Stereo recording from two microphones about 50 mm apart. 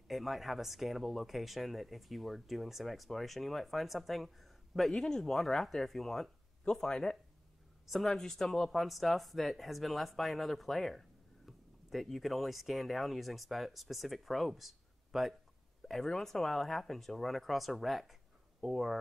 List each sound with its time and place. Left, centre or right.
0.1 s speech: centre
7.8 s speech: centre